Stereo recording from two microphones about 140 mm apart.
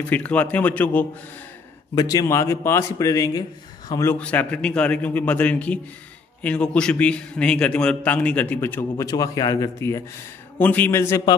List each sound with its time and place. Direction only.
0.1 s a man's voice: 10° left (ahead or behind)
2.0 s a man's voice: 25° left (ahead or behind)
9.0 s a man's voice: 25° left (ahead or behind)
10.6 s a man's voice: 10° left (ahead or behind)